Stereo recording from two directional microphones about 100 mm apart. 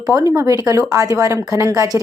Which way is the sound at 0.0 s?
40° right (ahead or behind).